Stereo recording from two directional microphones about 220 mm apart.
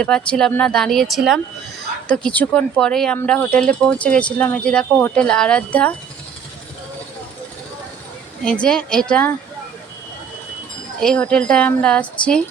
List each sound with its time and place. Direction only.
0.0 s speech: 5° left (ahead or behind)
8.6 s speech: 5° left (ahead or behind)
11.0 s speech: 5° left (ahead or behind)